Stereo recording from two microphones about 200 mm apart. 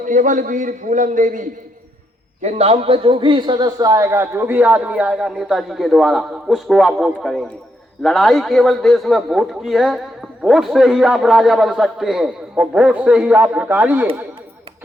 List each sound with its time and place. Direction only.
0.0 s a man's voice: 40° right (ahead or behind); by 14.1 s 10° right (ahead or behind)